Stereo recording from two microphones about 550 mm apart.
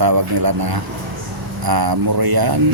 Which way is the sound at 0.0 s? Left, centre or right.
Right.